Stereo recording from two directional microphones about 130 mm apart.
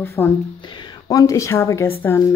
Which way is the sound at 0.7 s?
35° left (ahead or behind).